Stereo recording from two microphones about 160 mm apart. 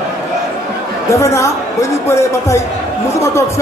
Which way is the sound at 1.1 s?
20° left (ahead or behind).